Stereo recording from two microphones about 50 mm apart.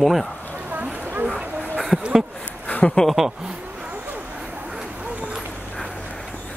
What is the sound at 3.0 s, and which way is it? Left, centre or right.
Speech, centre.